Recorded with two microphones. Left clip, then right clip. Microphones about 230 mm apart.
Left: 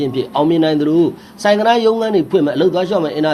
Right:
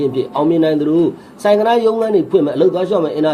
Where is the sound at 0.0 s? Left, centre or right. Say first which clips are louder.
Even; left.